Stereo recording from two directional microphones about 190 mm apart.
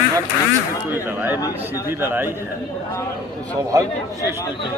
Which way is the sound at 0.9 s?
10° right (ahead or behind).